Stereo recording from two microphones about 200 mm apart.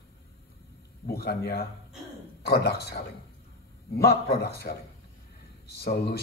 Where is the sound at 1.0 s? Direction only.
50° left (ahead or behind).